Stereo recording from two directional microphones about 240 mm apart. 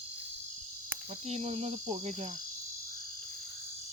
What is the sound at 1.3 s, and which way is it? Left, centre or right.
Cricket, right.